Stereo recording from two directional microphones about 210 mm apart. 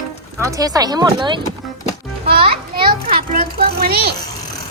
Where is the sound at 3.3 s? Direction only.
45° right (ahead or behind).